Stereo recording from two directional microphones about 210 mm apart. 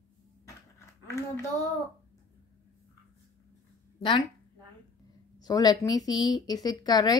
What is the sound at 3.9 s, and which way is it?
Speech, 25° left (ahead or behind).